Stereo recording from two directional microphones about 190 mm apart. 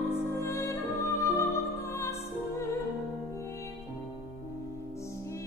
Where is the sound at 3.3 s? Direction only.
15° left (ahead or behind).